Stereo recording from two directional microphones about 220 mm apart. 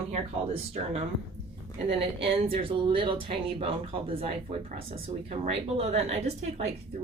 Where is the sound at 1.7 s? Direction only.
25° right (ahead or behind).